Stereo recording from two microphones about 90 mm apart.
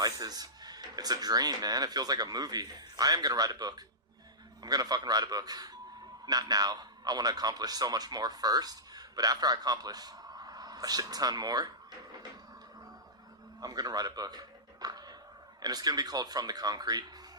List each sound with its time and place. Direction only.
0.0 s a man's voice: 45° right (ahead or behind)
13.6 s speech: 45° right (ahead or behind)